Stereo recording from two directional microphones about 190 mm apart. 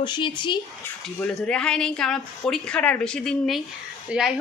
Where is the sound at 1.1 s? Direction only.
5° left (ahead or behind).